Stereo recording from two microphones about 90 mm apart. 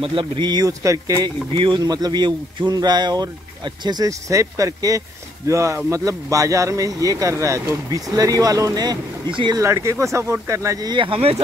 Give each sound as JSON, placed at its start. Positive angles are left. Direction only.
{"t": 0.0, "sound": "speech", "side_deg": -70}
{"t": 4.3, "sound": "speech", "side_deg": -35}
{"t": 9.3, "sound": "speech", "side_deg": -60}
{"t": 9.6, "sound": "speech", "side_deg": -30}
{"t": 10.9, "sound": "speech", "side_deg": -80}